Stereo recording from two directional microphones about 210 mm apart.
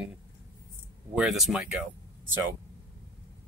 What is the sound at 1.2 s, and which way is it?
Speech, centre (ahead or behind).